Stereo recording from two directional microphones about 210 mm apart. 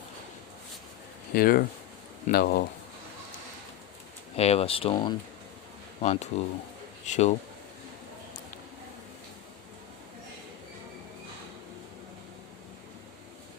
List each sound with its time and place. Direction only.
1.3 s speech: 45° left (ahead or behind)
4.4 s speech: 30° left (ahead or behind)